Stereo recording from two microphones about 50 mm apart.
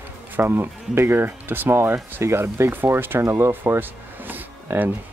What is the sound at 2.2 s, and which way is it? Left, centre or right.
Speech, right.